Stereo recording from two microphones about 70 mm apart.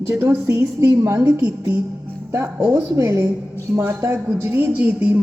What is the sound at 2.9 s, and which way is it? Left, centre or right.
A woman's voice, right.